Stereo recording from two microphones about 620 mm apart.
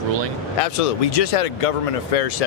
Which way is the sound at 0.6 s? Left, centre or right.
Left.